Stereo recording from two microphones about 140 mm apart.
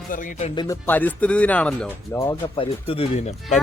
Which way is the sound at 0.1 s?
70° left (ahead or behind).